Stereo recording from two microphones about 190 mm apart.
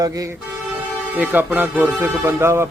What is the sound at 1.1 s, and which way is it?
Speech, 10° right (ahead or behind).